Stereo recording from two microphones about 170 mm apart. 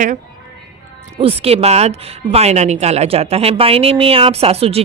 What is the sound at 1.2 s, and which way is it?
A woman's voice, 35° right (ahead or behind).